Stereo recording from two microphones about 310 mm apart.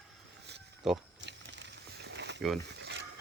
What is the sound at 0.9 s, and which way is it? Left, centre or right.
Speech, centre.